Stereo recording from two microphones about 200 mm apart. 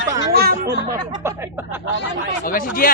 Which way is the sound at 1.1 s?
15° right (ahead or behind).